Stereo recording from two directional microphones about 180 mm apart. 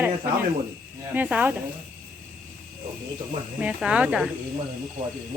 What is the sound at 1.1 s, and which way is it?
Speech, 10° right (ahead or behind).